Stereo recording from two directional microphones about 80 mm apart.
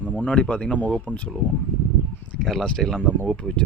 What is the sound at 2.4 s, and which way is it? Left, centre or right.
Speech, centre.